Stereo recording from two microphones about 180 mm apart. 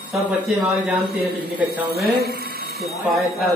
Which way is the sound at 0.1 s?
Centre (ahead or behind).